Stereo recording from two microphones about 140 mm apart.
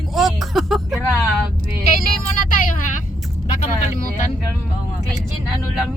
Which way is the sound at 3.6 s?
60° left (ahead or behind).